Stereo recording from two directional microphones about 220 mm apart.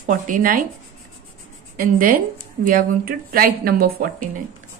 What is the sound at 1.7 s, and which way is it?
A woman's voice, 40° right (ahead or behind).